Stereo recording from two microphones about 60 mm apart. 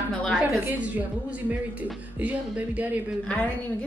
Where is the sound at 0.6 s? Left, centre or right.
Right.